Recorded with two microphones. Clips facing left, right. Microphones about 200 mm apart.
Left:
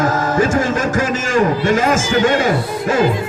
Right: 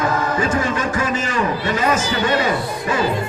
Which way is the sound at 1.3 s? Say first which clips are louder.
Left 6 dB; 45° left (ahead or behind).